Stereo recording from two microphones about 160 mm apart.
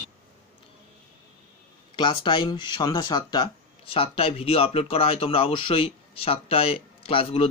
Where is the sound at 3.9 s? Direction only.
35° left (ahead or behind).